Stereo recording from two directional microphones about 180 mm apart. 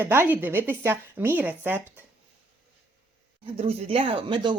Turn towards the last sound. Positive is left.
turn(degrees=-25)  # may be behind; listen again after turning